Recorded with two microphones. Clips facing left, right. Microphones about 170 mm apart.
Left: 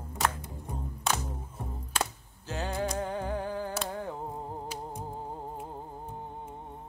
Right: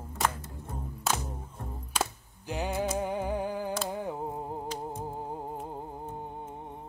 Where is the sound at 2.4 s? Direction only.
15° right (ahead or behind).